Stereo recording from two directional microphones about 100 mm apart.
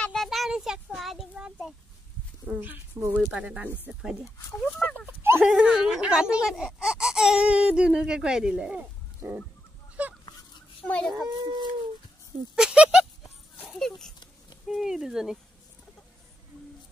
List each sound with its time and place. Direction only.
0.0 s child singing: 5° left (ahead or behind)
1.3 s a sound: 5° right (ahead or behind)
2.4 s speech: 15° right (ahead or behind)
4.7 s a sound: 10° left (ahead or behind)
5.0 s dog: 25° right (ahead or behind)
5.4 s speech: 5° right (ahead or behind)
10.0 s goose: 15° right (ahead or behind)
10.9 s a child's voice: 10° left (ahead or behind)
11.1 s speech: 45° right (ahead or behind)
12.5 s speech: 10° right (ahead or behind)
13.7 s a sound: 5° left (ahead or behind)
14.7 s speech: 5° right (ahead or behind)